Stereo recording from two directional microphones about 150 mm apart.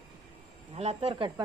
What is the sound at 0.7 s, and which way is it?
Speech, 45° right (ahead or behind).